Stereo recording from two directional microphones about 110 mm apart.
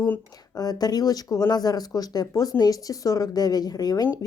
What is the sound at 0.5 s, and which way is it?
Speech, 35° left (ahead or behind).